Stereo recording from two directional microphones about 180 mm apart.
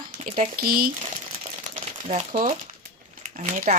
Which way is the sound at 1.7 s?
40° right (ahead or behind).